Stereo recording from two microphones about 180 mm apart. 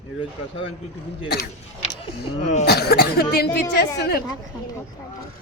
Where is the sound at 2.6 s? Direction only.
60° left (ahead or behind).